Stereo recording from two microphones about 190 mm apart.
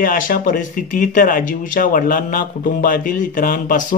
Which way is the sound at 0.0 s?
50° left (ahead or behind).